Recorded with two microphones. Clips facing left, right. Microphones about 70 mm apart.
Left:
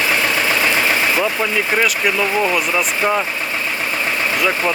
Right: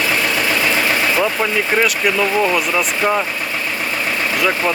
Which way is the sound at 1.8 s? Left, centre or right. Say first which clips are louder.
Right 2 dB; centre.